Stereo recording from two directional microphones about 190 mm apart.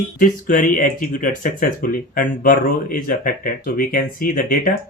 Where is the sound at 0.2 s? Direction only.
45° left (ahead or behind).